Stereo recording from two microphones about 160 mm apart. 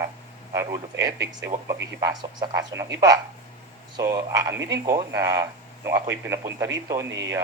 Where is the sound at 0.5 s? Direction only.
20° right (ahead or behind).